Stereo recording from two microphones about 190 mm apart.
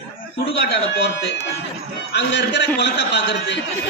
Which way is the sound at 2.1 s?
65° left (ahead or behind).